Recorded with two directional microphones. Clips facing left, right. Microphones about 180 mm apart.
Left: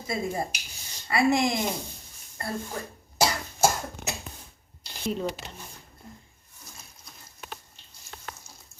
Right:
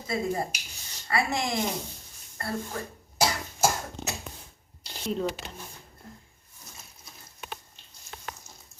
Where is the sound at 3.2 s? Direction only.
5° left (ahead or behind).